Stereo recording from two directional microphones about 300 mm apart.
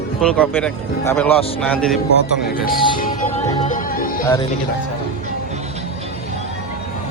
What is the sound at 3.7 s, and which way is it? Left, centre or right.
Music, left.